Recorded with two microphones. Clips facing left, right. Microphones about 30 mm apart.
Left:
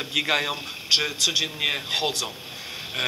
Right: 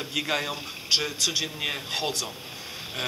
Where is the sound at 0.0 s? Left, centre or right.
Left.